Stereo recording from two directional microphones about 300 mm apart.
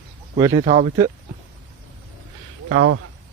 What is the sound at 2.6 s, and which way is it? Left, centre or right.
Speech, right.